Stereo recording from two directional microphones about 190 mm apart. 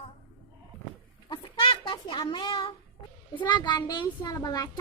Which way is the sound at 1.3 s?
25° left (ahead or behind).